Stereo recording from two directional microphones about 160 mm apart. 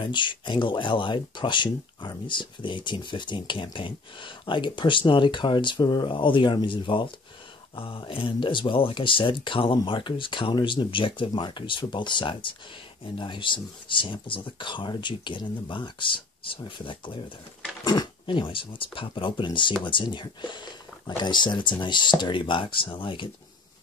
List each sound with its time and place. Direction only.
0.0 s speech: 30° left (ahead or behind)